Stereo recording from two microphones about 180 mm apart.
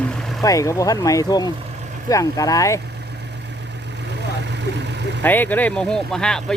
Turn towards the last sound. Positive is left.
turn(degrees=5)  # may be behind; listen again after turning